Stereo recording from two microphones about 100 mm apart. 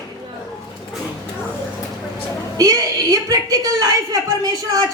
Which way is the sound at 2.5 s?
35° right (ahead or behind).